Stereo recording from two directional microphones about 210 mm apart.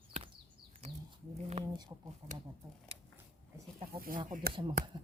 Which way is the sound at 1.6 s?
30° right (ahead or behind).